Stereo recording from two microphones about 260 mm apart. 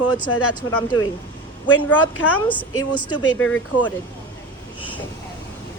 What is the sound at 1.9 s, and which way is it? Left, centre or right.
A woman's voice, centre.